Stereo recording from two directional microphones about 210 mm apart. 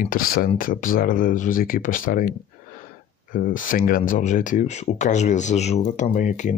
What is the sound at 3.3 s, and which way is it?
Speech, 40° left (ahead or behind).